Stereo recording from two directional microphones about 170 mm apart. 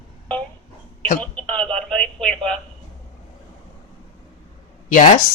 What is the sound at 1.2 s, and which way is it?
Radio, 10° left (ahead or behind).